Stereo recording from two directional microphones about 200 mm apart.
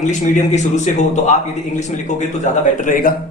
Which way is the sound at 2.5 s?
35° left (ahead or behind).